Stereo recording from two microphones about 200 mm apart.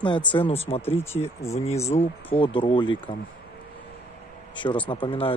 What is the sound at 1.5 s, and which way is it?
Speech, 30° left (ahead or behind).